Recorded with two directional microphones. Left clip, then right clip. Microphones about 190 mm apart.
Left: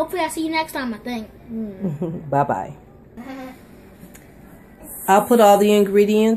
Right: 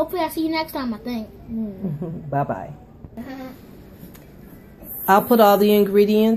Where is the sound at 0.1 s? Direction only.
Centre (ahead or behind).